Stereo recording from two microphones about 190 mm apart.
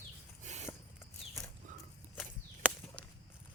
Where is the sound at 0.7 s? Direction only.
15° left (ahead or behind).